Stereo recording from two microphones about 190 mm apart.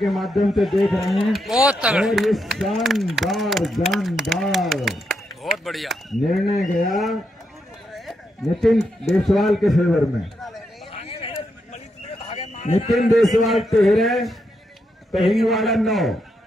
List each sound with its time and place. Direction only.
0.0 s a man's voice: centre (ahead or behind)
10.9 s a sound: 30° left (ahead or behind)
12.9 s speech: centre (ahead or behind)